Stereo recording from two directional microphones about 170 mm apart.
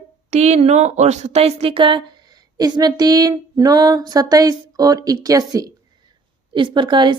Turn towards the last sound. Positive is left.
turn(degrees=-25)  # may be behind; listen again after turning